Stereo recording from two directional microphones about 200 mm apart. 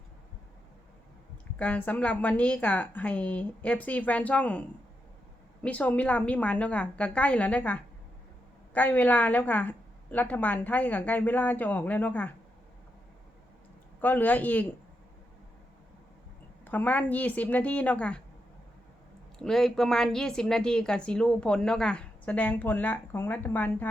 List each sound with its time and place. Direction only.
1.5 s a woman's voice: 5° left (ahead or behind)
5.6 s a woman's voice: 5° left (ahead or behind)
14.0 s a woman's voice: 10° left (ahead or behind)
16.6 s a woman's voice: 10° left (ahead or behind)
19.4 s a woman's voice: centre (ahead or behind)